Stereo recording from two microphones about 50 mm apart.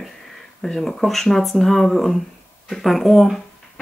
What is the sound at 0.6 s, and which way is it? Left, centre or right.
Speech, centre.